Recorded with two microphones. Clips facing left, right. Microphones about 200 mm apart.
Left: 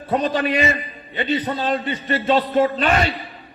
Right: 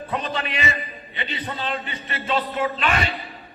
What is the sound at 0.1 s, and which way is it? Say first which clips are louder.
A man's voice: left 9 dB; 35° left (ahead or behind).